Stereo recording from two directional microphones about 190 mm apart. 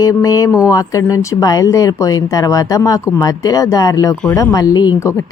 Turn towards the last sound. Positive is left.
turn(degrees=15)  # may be behind; listen again after turning